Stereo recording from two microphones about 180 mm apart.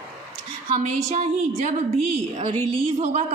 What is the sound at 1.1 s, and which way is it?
Speech, 40° right (ahead or behind).